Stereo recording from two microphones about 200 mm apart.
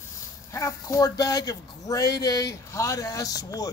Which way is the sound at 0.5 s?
15° left (ahead or behind).